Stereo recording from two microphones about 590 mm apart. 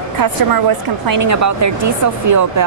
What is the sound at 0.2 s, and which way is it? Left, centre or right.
Speech, right.